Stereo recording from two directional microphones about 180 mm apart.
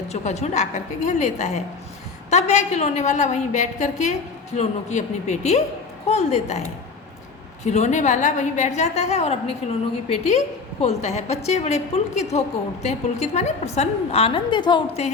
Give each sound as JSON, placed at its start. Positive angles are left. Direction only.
{"t": 0.1, "sound": "a woman's voice", "side_deg": 35}